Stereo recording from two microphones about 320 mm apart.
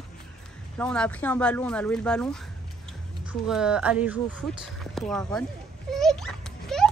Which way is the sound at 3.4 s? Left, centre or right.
Centre.